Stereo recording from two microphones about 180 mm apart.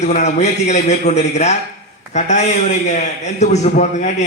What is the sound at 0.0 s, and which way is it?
A man's voice, 40° left (ahead or behind).